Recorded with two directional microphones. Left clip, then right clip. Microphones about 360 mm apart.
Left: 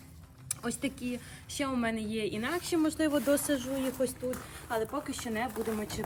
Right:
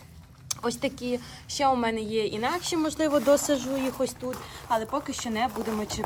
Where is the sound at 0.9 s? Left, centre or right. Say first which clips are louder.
Right 8 dB; centre.